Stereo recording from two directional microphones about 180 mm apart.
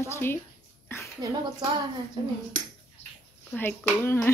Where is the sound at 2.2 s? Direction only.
25° right (ahead or behind).